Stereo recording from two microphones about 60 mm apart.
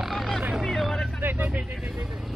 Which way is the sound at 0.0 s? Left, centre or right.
Centre.